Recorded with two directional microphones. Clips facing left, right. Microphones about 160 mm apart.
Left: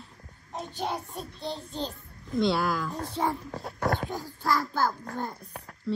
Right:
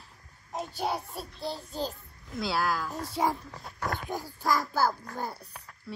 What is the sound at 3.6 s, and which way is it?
Speech, 40° left (ahead or behind).